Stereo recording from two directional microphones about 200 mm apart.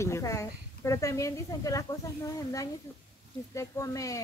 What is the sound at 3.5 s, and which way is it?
Speech, 15° left (ahead or behind).